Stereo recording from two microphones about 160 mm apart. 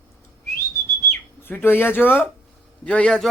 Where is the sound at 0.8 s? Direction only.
15° left (ahead or behind).